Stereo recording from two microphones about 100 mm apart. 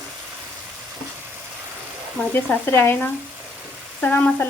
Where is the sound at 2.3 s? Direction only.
20° left (ahead or behind).